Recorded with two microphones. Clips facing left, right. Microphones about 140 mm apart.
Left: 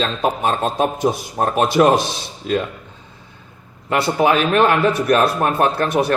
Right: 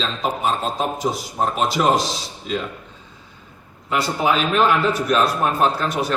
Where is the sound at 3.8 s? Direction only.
60° left (ahead or behind).